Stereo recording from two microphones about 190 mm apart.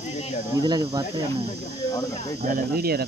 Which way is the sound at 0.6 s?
20° right (ahead or behind).